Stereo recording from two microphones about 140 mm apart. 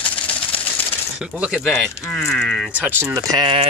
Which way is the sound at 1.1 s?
10° right (ahead or behind).